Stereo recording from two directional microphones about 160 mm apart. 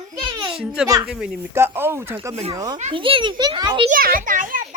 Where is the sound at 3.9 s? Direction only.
60° right (ahead or behind).